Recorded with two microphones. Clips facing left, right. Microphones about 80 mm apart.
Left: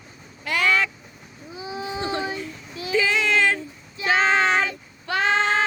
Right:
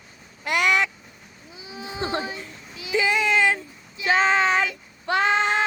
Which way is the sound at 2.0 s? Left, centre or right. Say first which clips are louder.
Right 1 dB; right.